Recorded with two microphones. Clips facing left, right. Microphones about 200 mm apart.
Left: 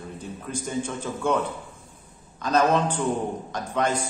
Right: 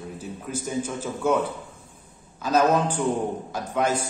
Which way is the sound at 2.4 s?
5° right (ahead or behind).